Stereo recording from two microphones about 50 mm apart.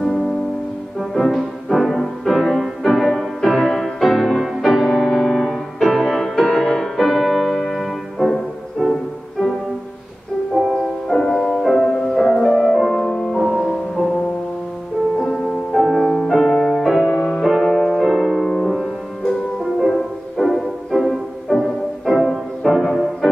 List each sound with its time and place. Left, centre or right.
0.9 s music: centre
10.7 s music: centre
11.8 s music: centre
12.2 s music: centre
13.4 s music: centre
15.1 s music: centre
16.8 s music: centre